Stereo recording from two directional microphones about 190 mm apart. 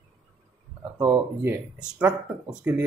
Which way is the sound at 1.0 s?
10° right (ahead or behind).